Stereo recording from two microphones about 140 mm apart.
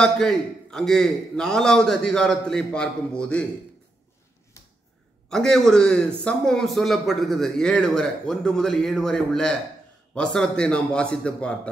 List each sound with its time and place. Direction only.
0.0 s speech: 5° left (ahead or behind)
4.6 s finger snapping: 20° left (ahead or behind)
5.3 s a man's voice: 5° left (ahead or behind)